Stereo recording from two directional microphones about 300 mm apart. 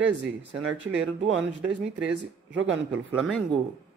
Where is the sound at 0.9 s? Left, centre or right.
Right.